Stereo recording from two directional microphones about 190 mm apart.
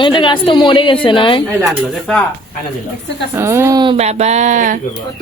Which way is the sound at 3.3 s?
15° right (ahead or behind).